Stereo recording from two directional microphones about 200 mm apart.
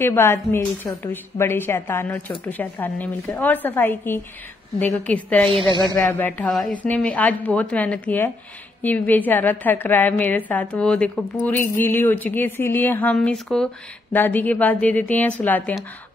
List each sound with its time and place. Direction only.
0.0 s a woman's voice: 10° left (ahead or behind)
5.5 s speech: 25° right (ahead or behind)
6.0 s a woman's voice: 10° left (ahead or behind)